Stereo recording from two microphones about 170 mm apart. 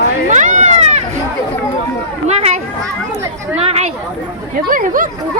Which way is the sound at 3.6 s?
35° right (ahead or behind).